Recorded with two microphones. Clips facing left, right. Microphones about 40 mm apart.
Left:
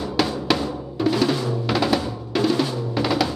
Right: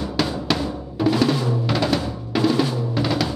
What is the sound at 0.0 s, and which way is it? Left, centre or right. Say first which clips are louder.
Drum: left 1 dB; centre.